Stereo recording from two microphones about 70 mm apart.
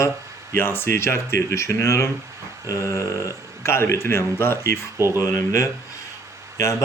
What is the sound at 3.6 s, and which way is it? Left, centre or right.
Speech, left.